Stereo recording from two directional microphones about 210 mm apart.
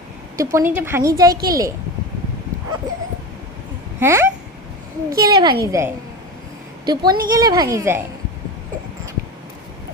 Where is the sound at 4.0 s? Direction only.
10° right (ahead or behind).